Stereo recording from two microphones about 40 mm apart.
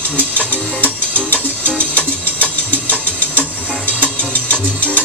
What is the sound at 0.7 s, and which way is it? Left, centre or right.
Music, left.